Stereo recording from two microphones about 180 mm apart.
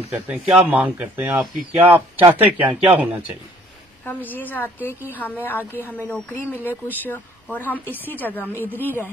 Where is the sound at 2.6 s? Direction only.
30° right (ahead or behind).